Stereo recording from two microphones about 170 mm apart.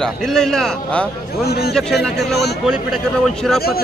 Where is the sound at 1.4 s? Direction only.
70° left (ahead or behind).